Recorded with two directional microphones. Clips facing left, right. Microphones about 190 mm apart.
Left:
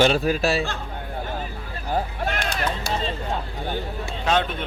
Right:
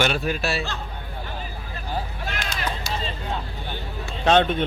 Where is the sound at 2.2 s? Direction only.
55° left (ahead or behind).